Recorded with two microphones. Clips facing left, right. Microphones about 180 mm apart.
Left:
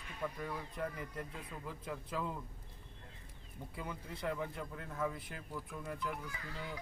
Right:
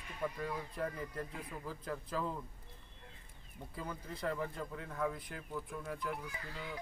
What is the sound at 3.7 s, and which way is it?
Speech, 5° left (ahead or behind).